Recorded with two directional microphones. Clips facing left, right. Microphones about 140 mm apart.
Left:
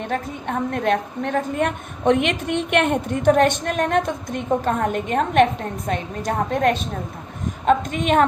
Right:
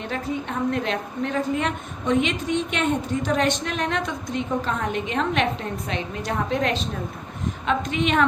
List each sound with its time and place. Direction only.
0.0 s a woman's voice: 50° left (ahead or behind)